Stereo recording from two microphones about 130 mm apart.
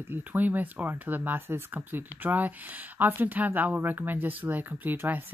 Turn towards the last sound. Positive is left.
turn(degrees=-15)  # may be behind; listen again after turning